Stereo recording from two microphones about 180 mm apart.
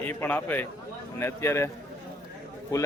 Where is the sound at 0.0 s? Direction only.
10° left (ahead or behind).